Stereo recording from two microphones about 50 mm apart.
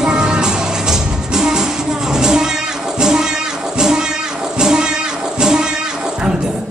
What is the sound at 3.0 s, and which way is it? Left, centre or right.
Music, centre.